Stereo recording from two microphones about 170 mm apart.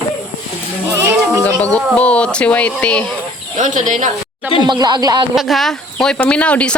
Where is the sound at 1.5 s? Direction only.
10° left (ahead or behind).